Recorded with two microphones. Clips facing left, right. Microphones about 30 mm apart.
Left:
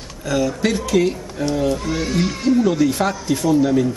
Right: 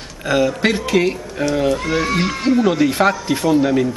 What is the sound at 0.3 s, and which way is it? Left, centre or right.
Speech, right.